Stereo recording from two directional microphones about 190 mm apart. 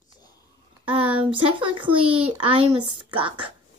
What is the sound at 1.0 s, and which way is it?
A child's voice, 30° right (ahead or behind).